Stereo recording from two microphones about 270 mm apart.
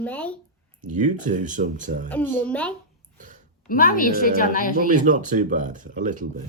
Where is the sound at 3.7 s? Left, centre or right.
Left.